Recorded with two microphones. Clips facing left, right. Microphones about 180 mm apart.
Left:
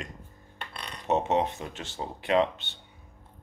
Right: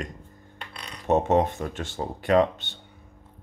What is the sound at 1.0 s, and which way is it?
Speech, 50° right (ahead or behind).